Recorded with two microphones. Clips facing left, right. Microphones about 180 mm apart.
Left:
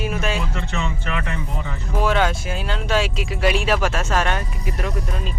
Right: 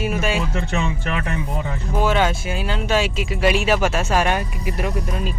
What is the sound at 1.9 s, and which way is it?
Speech, 5° right (ahead or behind).